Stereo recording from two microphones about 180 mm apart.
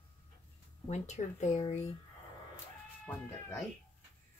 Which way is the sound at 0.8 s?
40° left (ahead or behind).